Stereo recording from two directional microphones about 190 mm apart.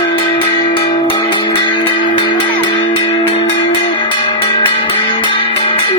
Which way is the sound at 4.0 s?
25° left (ahead or behind).